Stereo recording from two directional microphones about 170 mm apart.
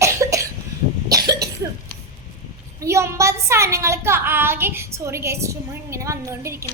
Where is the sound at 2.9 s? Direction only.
15° right (ahead or behind).